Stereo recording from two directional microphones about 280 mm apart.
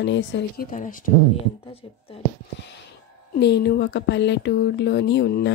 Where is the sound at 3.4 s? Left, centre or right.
Left.